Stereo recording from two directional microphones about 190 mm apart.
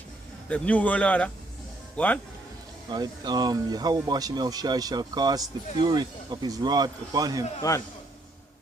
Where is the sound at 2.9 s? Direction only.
20° right (ahead or behind).